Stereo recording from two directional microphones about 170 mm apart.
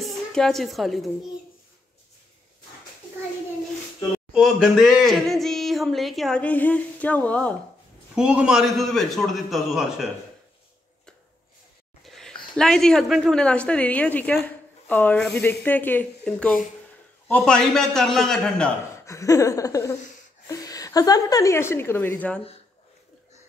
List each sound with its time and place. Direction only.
0.0 s a woman's voice: 5° left (ahead or behind)
4.3 s speech: centre (ahead or behind)
8.1 s a man's voice: 5° right (ahead or behind)
12.0 s a woman's voice: centre (ahead or behind)
19.0 s a woman's voice: 20° left (ahead or behind)